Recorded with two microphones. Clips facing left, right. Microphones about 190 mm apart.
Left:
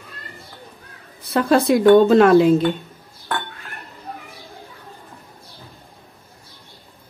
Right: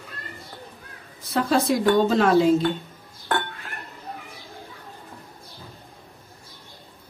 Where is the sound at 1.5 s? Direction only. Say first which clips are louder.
Left 8 dB; 60° left (ahead or behind).